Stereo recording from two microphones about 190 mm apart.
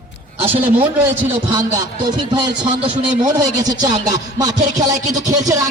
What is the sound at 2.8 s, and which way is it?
Speech, 30° right (ahead or behind).